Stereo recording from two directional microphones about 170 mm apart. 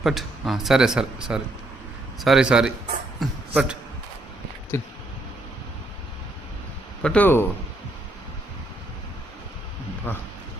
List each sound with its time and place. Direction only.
0.0 s speech: centre (ahead or behind)
4.7 s speech: 15° left (ahead or behind)
7.0 s speech: 10° left (ahead or behind)
10.1 s speech: 10° left (ahead or behind)